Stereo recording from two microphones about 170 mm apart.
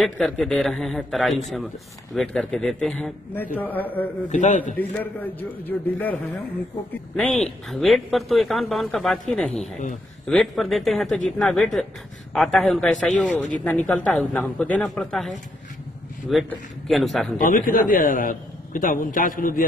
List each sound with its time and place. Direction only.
0.0 s a man's voice: 5° left (ahead or behind)
4.3 s a man's voice: 45° left (ahead or behind)
4.7 s a man's voice: 10° left (ahead or behind)
7.2 s a man's voice: centre (ahead or behind)
9.5 s a man's voice: 40° left (ahead or behind)
10.2 s a man's voice: centre (ahead or behind)
16.4 s a man's voice: centre (ahead or behind)
17.4 s a man's voice: 55° left (ahead or behind)